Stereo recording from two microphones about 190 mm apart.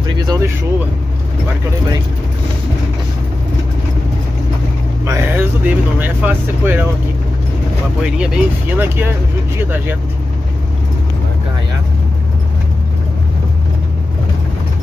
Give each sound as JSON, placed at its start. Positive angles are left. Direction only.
{"t": 0.3, "sound": "speech", "side_deg": -15}
{"t": 5.0, "sound": "speech", "side_deg": -15}
{"t": 8.0, "sound": "speech", "side_deg": -5}